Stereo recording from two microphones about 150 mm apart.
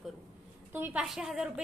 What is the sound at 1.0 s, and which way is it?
Speech, centre (ahead or behind).